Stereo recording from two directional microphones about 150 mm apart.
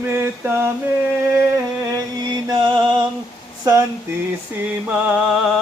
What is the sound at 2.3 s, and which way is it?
Music, 30° right (ahead or behind).